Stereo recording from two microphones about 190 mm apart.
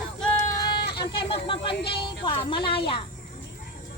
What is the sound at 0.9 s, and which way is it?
Snake, 25° left (ahead or behind).